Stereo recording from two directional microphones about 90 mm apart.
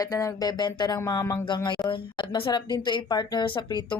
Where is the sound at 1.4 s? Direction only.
60° left (ahead or behind).